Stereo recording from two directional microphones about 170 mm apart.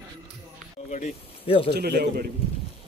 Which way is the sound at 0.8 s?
40° left (ahead or behind).